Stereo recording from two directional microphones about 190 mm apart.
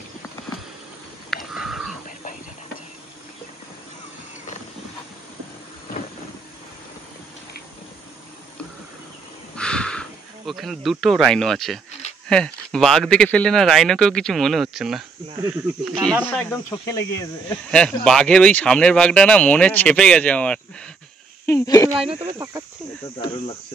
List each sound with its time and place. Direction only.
1.3 s a sound: centre (ahead or behind)
9.6 s insect: 5° left (ahead or behind)
12.3 s speech: 5° left (ahead or behind)
16.7 s cricket: 15° left (ahead or behind)
17.6 s speech: 5° left (ahead or behind)
21.5 s cricket: 15° left (ahead or behind)